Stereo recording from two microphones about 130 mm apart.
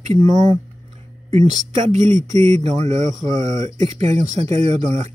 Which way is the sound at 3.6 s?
55° right (ahead or behind).